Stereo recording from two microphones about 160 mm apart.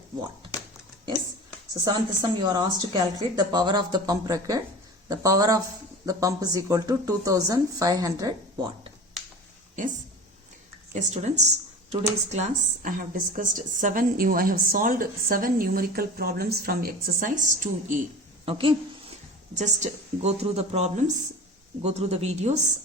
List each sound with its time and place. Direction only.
1.8 s speech: 25° right (ahead or behind)
10.9 s speech: 45° right (ahead or behind)
18.4 s a woman's voice: 35° right (ahead or behind)
19.5 s a woman's voice: 45° right (ahead or behind)